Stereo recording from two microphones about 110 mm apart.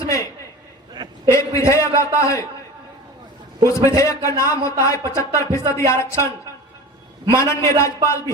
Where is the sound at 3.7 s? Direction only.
25° left (ahead or behind).